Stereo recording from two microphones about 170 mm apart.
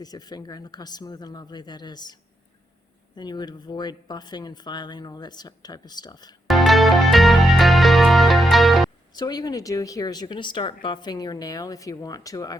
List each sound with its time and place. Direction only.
0.0 s speech: 25° left (ahead or behind)
3.2 s speech: 25° left (ahead or behind)
6.5 s music: centre (ahead or behind)
9.1 s speech: 25° left (ahead or behind)